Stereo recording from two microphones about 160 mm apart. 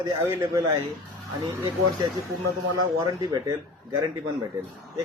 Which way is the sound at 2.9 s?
20° right (ahead or behind).